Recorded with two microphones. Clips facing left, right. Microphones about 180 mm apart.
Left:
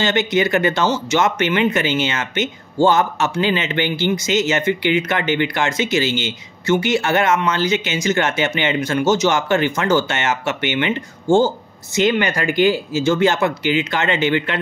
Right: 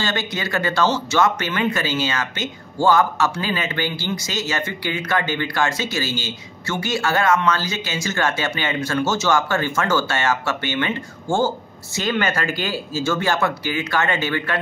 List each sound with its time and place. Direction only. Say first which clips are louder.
0.0 s speech: left 8 dB; 20° left (ahead or behind)